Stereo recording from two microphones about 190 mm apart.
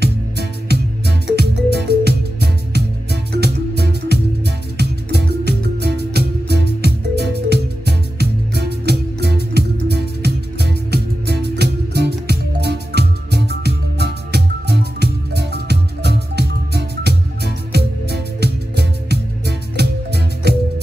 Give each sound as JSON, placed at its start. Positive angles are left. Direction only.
{"t": 0.0, "sound": "music", "side_deg": -60}